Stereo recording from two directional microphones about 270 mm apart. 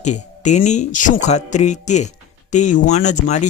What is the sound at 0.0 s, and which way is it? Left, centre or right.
Speech, left.